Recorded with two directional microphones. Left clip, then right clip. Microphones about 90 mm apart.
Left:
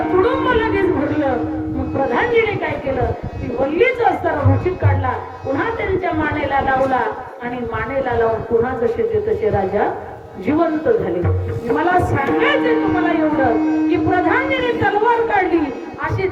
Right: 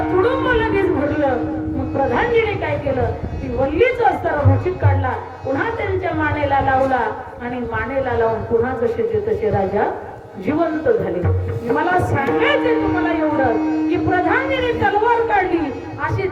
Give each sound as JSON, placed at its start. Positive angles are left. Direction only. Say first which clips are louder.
{"t": 0.0, "sound": "music", "louder": "left 1 dB", "side_deg": 30}
{"t": 2.0, "sound": "a sound", "louder": "left 1 dB", "side_deg": 35}
{"t": 3.8, "sound": "a woman's voice", "louder": "even", "side_deg": 25}
{"t": 13.7, "sound": "music", "louder": "left 2 dB", "side_deg": -35}
{"t": 14.1, "sound": "a woman's voice", "louder": "right 1 dB", "side_deg": 30}